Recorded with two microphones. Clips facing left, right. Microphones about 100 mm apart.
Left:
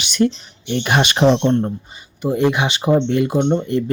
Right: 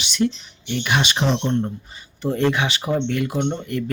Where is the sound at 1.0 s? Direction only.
55° left (ahead or behind).